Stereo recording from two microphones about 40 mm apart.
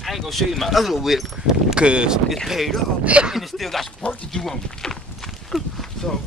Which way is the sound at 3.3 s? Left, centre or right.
Centre.